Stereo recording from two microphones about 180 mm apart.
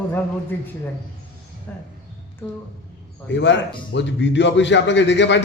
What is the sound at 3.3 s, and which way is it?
A man's voice, 80° left.